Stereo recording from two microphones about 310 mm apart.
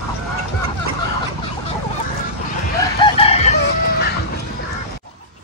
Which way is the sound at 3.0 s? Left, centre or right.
Centre.